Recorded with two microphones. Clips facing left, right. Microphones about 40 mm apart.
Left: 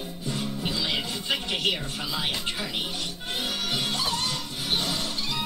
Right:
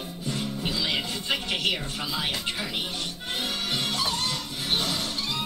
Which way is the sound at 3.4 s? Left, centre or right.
Centre.